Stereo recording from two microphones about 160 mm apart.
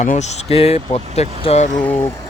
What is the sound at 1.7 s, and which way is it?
Speech, 10° left (ahead or behind).